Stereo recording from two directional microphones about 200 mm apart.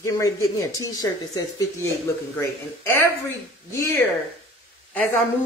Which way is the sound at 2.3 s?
15° left (ahead or behind).